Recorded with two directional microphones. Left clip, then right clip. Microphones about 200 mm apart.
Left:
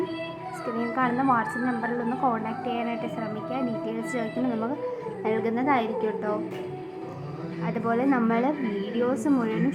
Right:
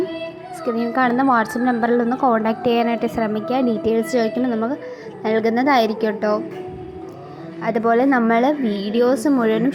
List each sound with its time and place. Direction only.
0.8 s a woman's voice: 30° right (ahead or behind)
7.6 s a woman's voice: 30° right (ahead or behind)